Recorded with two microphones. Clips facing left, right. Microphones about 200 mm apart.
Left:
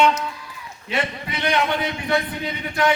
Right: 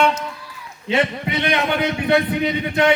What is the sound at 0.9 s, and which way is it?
Speech, 25° right (ahead or behind).